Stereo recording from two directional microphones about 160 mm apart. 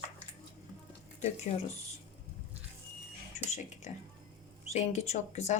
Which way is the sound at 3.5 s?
45° left (ahead or behind).